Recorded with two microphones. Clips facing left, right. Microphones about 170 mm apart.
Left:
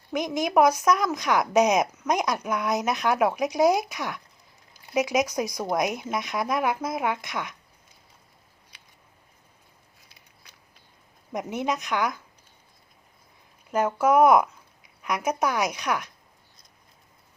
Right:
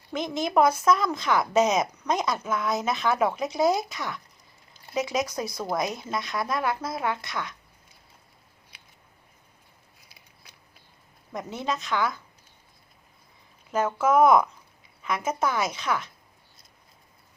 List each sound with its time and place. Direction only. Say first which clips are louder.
0.1 s a woman's voice: left 2 dB; 15° left (ahead or behind)
11.3 s a woman's voice: left 3 dB; 20° left (ahead or behind)
13.7 s a woman's voice: left 2 dB; 10° left (ahead or behind)